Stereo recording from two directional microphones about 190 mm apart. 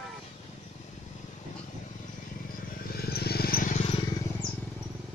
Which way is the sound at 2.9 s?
55° left (ahead or behind).